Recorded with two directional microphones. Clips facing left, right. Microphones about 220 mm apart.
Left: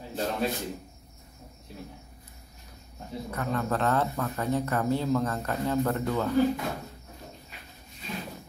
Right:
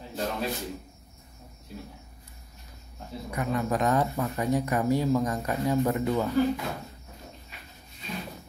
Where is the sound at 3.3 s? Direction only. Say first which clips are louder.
Right 2 dB; 15° right (ahead or behind).